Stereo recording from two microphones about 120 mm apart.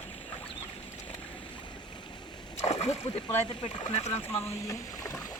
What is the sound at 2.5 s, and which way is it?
Speech, 65° left (ahead or behind).